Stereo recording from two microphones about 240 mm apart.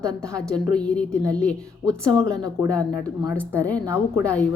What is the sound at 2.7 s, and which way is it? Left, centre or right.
Speech, centre.